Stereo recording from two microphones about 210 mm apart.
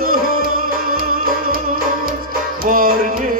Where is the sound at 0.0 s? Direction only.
45° right (ahead or behind).